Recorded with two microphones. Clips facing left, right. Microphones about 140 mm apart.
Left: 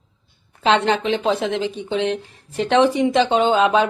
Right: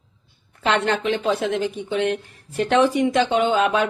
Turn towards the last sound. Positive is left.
turn(degrees=25)  # may be behind; listen again after turning